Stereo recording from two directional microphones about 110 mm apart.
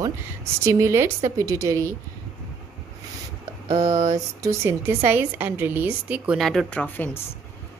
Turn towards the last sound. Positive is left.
turn(degrees=20)  # may be behind; listen again after turning